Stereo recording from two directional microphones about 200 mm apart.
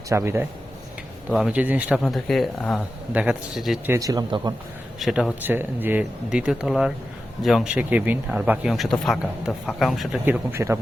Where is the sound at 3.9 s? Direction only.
15° right (ahead or behind).